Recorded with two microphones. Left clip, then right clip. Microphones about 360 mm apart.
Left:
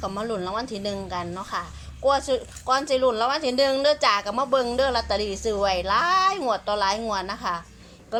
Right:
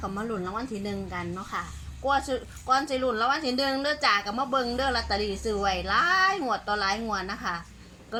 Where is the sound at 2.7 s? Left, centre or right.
Centre.